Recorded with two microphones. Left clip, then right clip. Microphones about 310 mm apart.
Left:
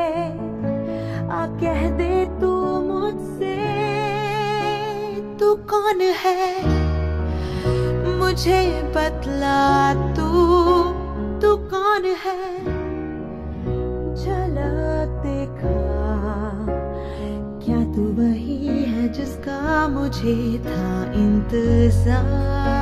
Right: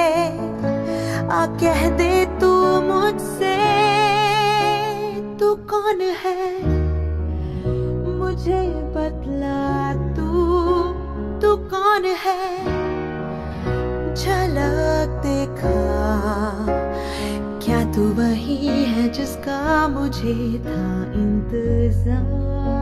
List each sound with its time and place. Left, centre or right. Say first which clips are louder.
0.0 s music: right 5 dB; right; by 4.9 s centre
5.4 s music: left 1 dB; centre
7.6 s music: left 2 dB; left; by 10.9 s centre
11.4 s music: right 1 dB; centre
14.2 s music: right 5 dB; right
17.6 s music: right 3 dB; right; by 19.1 s centre
19.6 s music: right 1 dB; centre; by 22.2 s left